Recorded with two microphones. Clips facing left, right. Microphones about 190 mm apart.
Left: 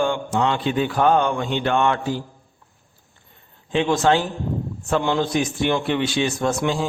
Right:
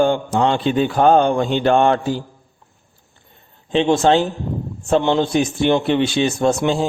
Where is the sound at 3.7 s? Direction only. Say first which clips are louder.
Right 4 dB; 25° right (ahead or behind).